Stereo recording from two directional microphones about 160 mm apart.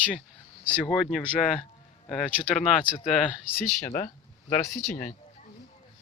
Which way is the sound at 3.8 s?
15° left (ahead or behind).